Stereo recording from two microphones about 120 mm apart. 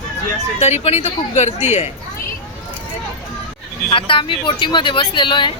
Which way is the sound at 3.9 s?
45° left (ahead or behind).